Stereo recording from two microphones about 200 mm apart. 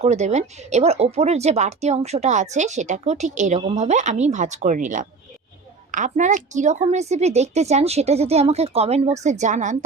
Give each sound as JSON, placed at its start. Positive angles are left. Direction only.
{"t": 0.0, "sound": "speech", "side_deg": -35}